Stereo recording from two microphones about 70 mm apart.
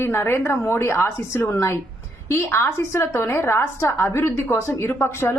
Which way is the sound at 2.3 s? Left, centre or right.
Left.